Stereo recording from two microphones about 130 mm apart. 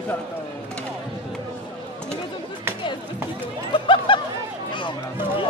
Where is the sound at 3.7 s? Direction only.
40° left (ahead or behind).